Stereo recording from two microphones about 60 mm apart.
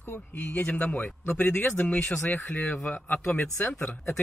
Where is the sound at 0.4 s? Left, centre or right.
Left.